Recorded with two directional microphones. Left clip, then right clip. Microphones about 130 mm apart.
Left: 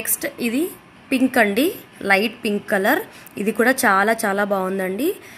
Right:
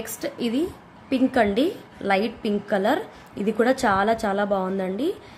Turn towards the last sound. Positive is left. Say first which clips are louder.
# left 4 dB
turn(degrees=15)  # may be behind; listen again after turning